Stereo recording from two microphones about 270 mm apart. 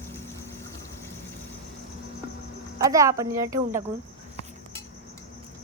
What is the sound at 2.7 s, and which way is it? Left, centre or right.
Speech, centre.